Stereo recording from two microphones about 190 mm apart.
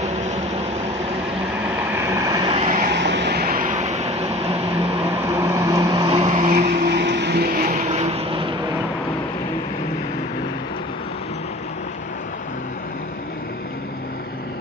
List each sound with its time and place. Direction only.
2.0 s vehicle: 15° right (ahead or behind)
2.5 s vehicle: 40° right (ahead or behind)
2.9 s vehicle: 65° right (ahead or behind); by 4.6 s 35° right (ahead or behind)
5.3 s vehicle: 15° right (ahead or behind); by 6.5 s 30° right (ahead or behind)
6.8 s vehicle: 60° right (ahead or behind)
7.7 s vehicle: 35° right (ahead or behind)